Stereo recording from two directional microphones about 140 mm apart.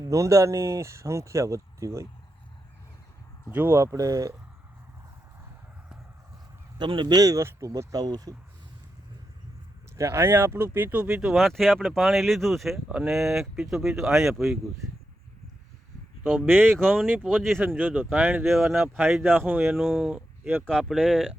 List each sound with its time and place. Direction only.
0.0 s speech: 25° right (ahead or behind)
3.5 s speech: 15° right (ahead or behind)
6.7 s speech: 35° right (ahead or behind)
10.0 s speech: 20° right (ahead or behind); by 14.4 s centre (ahead or behind)
16.5 s speech: 15° right (ahead or behind)
17.0 s speech: centre (ahead or behind)
17.7 s speech: 10° right (ahead or behind)
18.4 s speech: centre (ahead or behind)
19.2 s speech: 15° right (ahead or behind)
19.7 s speech: centre (ahead or behind)
20.7 s speech: 5° left (ahead or behind)